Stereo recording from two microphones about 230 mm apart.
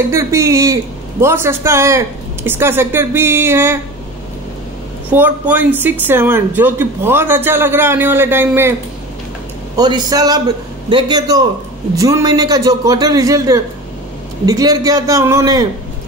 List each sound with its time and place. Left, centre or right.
0.1 s speech: centre
5.1 s speech: centre
9.8 s speech: centre